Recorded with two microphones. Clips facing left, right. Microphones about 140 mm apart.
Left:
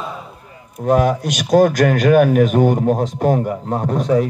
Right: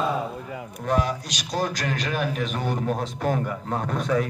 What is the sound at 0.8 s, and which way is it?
A man's voice, 50° left (ahead or behind).